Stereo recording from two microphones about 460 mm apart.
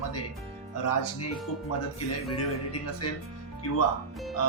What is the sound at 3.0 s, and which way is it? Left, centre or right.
Speech, left.